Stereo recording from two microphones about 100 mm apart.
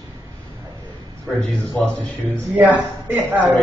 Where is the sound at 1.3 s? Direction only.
15° left (ahead or behind).